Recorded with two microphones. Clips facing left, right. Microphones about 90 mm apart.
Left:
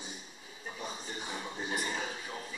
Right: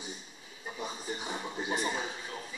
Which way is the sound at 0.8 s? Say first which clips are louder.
Right 3 dB; 15° right (ahead or behind).